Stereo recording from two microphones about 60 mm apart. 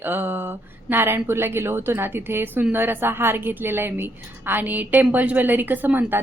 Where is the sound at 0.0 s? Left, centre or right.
Right.